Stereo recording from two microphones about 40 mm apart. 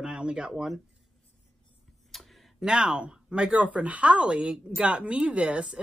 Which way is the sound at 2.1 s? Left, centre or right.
Centre.